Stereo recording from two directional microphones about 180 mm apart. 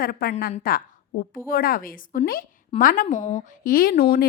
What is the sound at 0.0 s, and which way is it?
A woman's voice, 55° left (ahead or behind).